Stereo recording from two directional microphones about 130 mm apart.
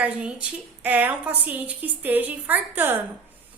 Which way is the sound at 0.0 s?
10° right (ahead or behind).